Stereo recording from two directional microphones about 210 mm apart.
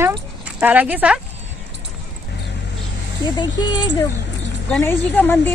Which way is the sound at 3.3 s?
20° left (ahead or behind).